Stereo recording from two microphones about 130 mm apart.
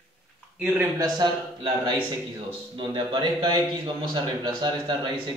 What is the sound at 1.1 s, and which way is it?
A man's voice, 35° right (ahead or behind).